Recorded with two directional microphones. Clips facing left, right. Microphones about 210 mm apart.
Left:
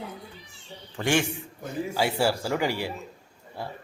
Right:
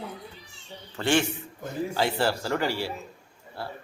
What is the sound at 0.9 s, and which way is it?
Speech, 15° left (ahead or behind).